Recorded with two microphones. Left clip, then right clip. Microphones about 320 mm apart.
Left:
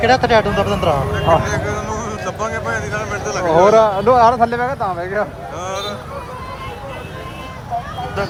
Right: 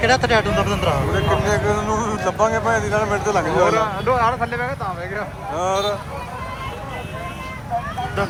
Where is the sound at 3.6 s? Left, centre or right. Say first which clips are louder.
Left 7 dB; left.